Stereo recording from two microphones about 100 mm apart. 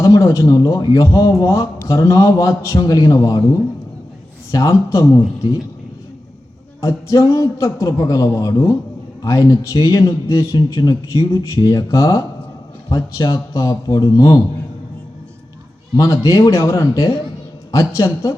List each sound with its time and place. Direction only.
0.2 s a man's voice: 35° left (ahead or behind)
6.8 s a man's voice: 35° left (ahead or behind)
10.8 s a man's voice: 45° left (ahead or behind)
16.0 s a man's voice: 30° left (ahead or behind)